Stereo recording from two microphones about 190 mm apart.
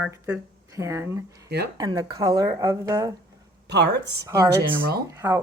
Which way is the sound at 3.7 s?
65° right (ahead or behind).